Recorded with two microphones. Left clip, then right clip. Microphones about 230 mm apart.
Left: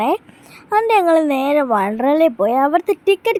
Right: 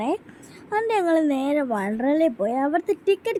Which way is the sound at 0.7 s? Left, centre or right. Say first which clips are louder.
Left 8 dB; centre.